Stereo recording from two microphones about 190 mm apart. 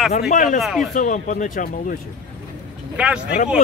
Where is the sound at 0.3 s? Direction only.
40° left (ahead or behind).